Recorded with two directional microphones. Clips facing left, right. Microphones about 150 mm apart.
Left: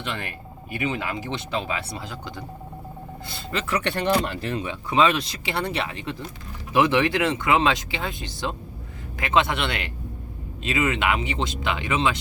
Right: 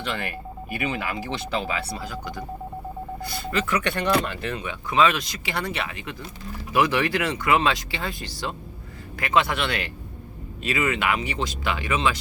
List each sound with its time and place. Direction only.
0.7 s speech: 20° left (ahead or behind)